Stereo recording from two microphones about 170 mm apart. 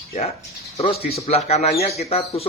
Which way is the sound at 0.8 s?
35° left (ahead or behind).